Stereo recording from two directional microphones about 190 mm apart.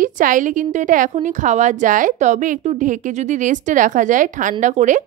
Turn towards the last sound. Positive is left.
turn(degrees=-40)  # may be behind; listen again after turning